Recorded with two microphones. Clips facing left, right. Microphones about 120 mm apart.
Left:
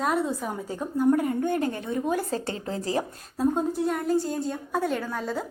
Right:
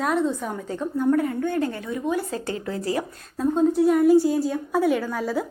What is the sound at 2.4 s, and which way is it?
Speech, 30° left (ahead or behind).